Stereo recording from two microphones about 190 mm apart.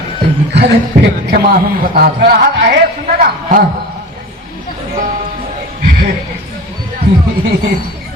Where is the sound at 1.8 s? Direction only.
50° right (ahead or behind).